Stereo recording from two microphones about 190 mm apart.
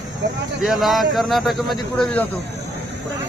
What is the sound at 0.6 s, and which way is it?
A man's voice, centre (ahead or behind).